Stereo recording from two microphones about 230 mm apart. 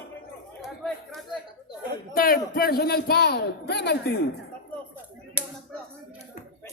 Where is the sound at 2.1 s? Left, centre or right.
Left.